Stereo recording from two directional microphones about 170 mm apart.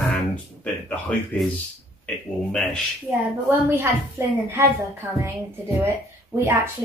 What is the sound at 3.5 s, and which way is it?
A woman's voice, 10° right (ahead or behind).